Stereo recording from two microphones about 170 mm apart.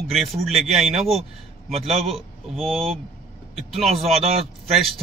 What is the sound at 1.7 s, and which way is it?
Speech, 35° right (ahead or behind).